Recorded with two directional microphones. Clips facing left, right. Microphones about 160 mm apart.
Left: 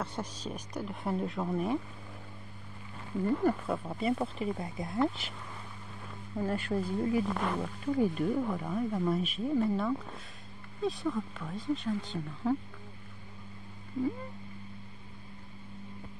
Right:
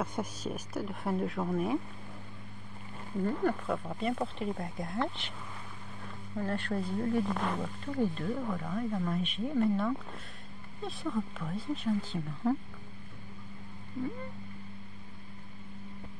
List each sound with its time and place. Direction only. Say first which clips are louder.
0.0 s speech: right 2 dB; 10° right (ahead or behind)
3.4 s speech: left 1 dB; 5° left (ahead or behind)
6.3 s speech: left 2 dB; 10° left (ahead or behind)